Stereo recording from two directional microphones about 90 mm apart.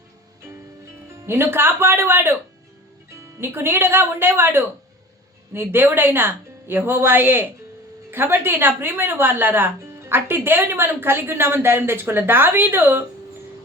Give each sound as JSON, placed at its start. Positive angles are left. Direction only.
{"t": 1.3, "sound": "speech", "side_deg": -25}